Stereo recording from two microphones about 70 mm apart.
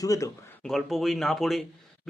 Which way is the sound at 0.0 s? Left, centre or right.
Left.